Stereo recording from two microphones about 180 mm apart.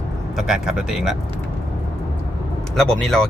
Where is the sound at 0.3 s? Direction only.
5° right (ahead or behind).